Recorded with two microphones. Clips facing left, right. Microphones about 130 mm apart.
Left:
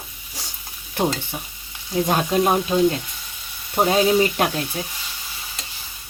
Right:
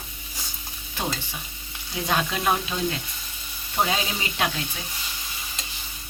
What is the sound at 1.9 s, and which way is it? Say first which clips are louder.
Frying: left 7 dB; 45° left (ahead or behind).